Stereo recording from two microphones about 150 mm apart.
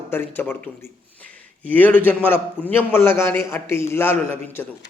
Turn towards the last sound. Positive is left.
turn(degrees=15)  # may be behind; listen again after turning